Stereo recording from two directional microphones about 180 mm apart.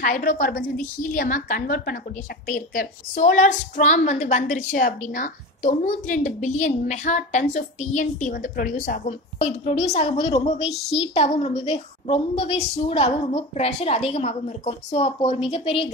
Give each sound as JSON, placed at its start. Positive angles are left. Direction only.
{"t": 0.0, "sound": "a woman's voice", "side_deg": 50}